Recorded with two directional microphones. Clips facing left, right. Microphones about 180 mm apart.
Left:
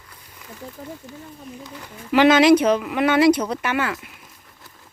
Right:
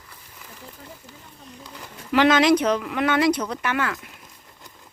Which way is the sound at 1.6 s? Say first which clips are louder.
Left 3 dB; 10° left (ahead or behind).